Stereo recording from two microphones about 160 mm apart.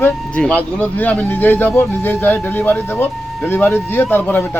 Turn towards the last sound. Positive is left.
turn(degrees=10)  # may be behind; listen again after turning